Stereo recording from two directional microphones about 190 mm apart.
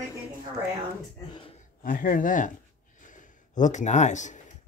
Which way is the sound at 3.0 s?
40° left (ahead or behind).